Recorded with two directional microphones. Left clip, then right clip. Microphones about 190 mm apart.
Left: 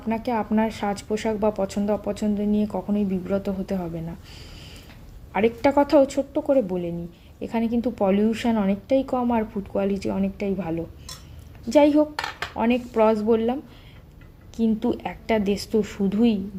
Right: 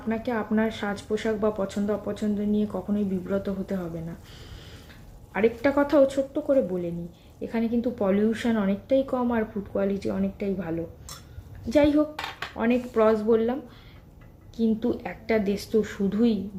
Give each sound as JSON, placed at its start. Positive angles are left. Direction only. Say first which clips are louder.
{"t": 0.1, "sound": "speech", "louder": "left 3 dB", "side_deg": 30}
{"t": 5.3, "sound": "speech", "louder": "left 3 dB", "side_deg": 30}